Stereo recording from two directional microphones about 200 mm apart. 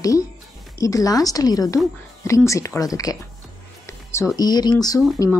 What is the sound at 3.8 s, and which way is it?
Music, 15° left (ahead or behind).